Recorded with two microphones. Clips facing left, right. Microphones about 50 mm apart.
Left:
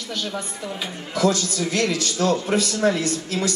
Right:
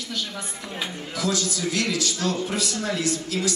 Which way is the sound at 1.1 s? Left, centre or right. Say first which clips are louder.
Left 6 dB; left.